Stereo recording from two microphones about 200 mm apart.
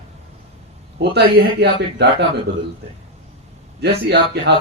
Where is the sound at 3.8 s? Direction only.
55° right (ahead or behind).